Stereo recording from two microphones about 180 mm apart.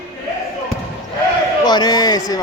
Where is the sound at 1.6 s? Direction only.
25° left (ahead or behind).